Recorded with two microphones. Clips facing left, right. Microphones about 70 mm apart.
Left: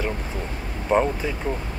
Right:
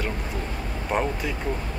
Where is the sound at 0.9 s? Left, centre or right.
Left.